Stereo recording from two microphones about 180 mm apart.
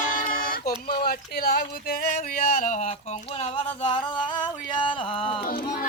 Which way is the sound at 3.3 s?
30° left (ahead or behind).